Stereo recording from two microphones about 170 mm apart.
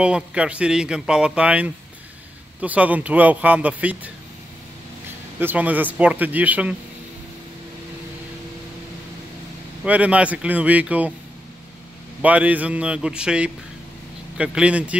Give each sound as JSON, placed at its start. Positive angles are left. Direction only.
{"t": 0.0, "sound": "a man's voice", "side_deg": -5}
{"t": 5.4, "sound": "speech", "side_deg": -10}
{"t": 9.8, "sound": "speech", "side_deg": -10}
{"t": 12.2, "sound": "speech", "side_deg": -10}